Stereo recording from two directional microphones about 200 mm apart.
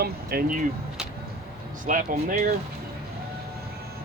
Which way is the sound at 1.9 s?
40° right (ahead or behind).